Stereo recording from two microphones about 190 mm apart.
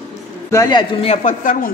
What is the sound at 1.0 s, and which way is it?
Speech, 45° left (ahead or behind).